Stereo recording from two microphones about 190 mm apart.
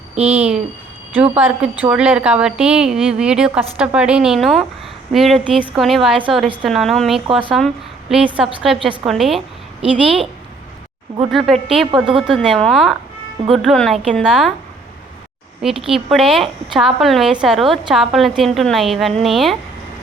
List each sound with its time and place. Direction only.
0.3 s a woman's voice: 10° right (ahead or behind)
7.3 s speech: 25° right (ahead or behind)
8.6 s a woman's voice: centre (ahead or behind)
11.3 s a woman's voice: centre (ahead or behind)
15.9 s a woman's voice: centre (ahead or behind)